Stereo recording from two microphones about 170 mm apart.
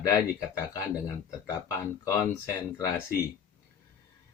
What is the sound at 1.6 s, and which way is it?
Speech, 15° left (ahead or behind).